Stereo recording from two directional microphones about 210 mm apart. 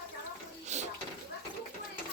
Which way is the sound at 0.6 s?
35° right (ahead or behind).